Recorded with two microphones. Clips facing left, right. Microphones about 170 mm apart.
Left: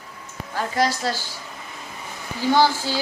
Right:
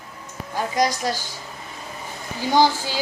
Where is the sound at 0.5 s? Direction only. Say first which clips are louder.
Right 1 dB; 15° right (ahead or behind).